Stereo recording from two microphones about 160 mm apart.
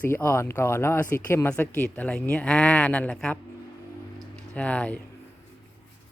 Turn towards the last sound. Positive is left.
turn(degrees=10)  # may be behind; listen again after turning